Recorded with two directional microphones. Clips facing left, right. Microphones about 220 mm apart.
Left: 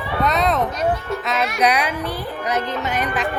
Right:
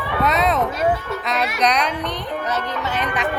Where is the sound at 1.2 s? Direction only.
Centre (ahead or behind).